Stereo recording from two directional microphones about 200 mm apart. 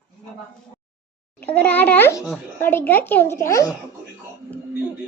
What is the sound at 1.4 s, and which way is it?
Speech, 10° left (ahead or behind).